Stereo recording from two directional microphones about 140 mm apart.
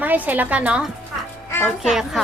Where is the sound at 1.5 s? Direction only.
15° left (ahead or behind).